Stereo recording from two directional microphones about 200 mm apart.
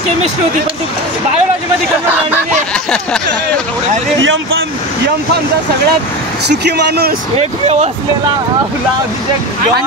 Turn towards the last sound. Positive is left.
turn(degrees=-30)  # may be behind; listen again after turning